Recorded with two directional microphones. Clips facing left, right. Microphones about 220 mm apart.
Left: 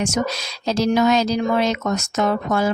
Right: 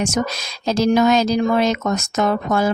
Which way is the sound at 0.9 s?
45° right (ahead or behind).